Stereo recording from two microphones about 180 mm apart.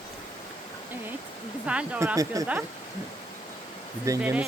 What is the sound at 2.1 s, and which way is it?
Speech, 20° right (ahead or behind).